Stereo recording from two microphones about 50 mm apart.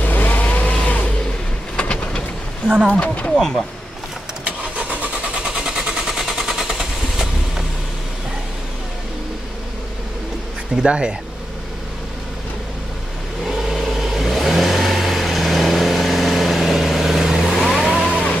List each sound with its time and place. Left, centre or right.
0.0 s vehicle: left
1.8 s vehicle: centre
2.9 s speech: left
3.3 s speech: centre
4.5 s vehicle: right
5.4 s vehicle: centre
10.9 s speech: centre
13.5 s vehicle: centre